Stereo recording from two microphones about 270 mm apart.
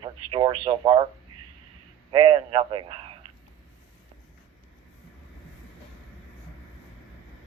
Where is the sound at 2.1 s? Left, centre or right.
Centre.